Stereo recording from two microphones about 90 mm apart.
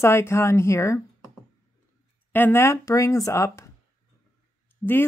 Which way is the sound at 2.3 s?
25° left (ahead or behind).